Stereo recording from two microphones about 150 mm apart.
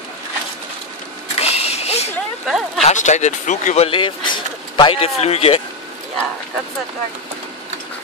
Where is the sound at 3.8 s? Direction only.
35° left (ahead or behind).